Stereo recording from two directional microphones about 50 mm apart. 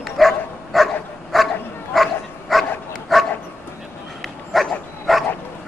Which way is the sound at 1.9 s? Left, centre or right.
Centre.